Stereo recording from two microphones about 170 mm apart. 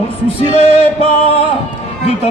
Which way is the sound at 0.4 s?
35° left (ahead or behind).